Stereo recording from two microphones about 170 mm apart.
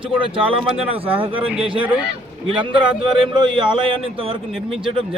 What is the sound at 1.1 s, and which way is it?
Speech, 10° right (ahead or behind).